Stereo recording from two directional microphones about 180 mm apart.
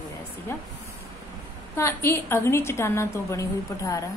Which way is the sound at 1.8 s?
10° left (ahead or behind).